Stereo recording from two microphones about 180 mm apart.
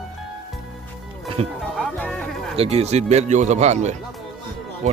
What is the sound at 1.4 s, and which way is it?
Speech, 30° right (ahead or behind).